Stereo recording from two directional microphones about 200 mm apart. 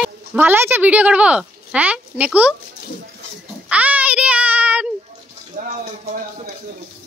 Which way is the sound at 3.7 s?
5° right (ahead or behind).